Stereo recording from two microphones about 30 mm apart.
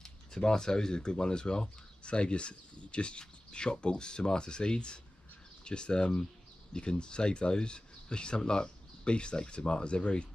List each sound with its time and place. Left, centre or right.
0.0 s speech: centre; by 10.2 s left